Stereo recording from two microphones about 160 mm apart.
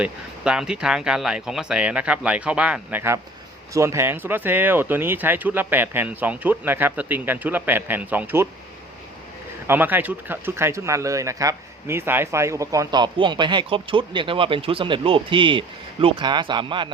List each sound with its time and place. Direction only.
0.0 s speech: 5° right (ahead or behind)
9.6 s speech: 10° right (ahead or behind); by 16.9 s 30° right (ahead or behind)